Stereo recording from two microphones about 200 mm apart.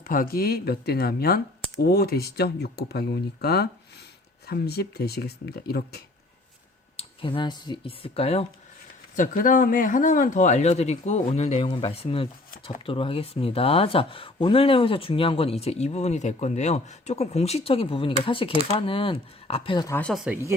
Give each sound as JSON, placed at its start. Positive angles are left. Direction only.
{"t": 0.0, "sound": "speech", "side_deg": 45}
{"t": 6.9, "sound": "speech", "side_deg": 25}
{"t": 9.1, "sound": "speech", "side_deg": 40}
{"t": 20.0, "sound": "speech", "side_deg": 0}